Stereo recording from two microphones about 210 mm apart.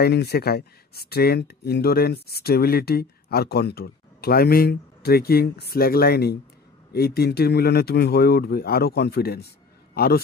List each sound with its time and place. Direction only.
0.0 s a man's voice: 50° left (ahead or behind)